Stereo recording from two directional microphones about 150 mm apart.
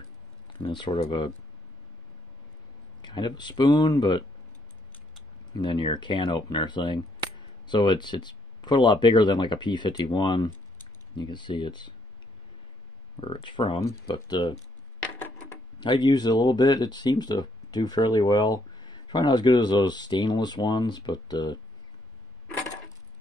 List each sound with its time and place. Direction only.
0.5 s speech: 30° left (ahead or behind)
3.0 s speech: 30° left (ahead or behind)
5.5 s speech: 30° left (ahead or behind)
13.2 s speech: 35° left (ahead or behind)
15.1 s a sound: 10° left (ahead or behind)
15.8 s speech: 30° left (ahead or behind)